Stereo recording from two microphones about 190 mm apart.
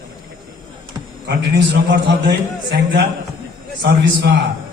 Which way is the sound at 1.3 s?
65° right (ahead or behind).